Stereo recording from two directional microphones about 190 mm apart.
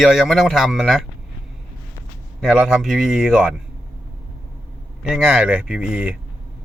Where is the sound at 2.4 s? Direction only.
5° right (ahead or behind).